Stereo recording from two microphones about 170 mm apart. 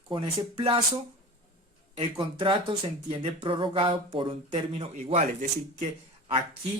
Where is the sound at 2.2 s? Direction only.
30° right (ahead or behind); by 5.4 s 45° right (ahead or behind).